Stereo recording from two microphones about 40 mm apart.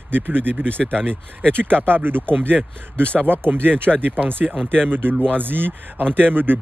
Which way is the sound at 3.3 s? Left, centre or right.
Right.